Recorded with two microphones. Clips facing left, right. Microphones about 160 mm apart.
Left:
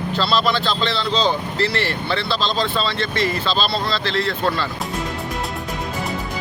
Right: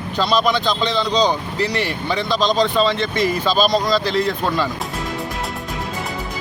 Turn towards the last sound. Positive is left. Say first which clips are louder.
# right 2 dB
turn(degrees=-15)  # may be behind; listen again after turning